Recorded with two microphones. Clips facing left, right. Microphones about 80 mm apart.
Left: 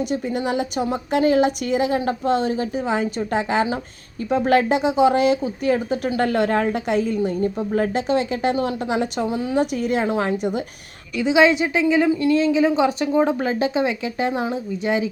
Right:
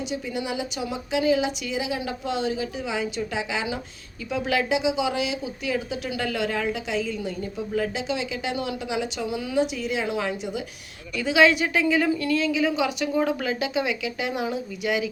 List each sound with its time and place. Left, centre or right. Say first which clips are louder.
0.1 s a woman's voice: left 6 dB; left
11.2 s speech: left 3 dB; left